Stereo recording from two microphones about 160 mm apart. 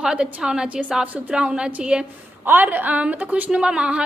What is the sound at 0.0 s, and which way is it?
A woman's voice, 5° right (ahead or behind).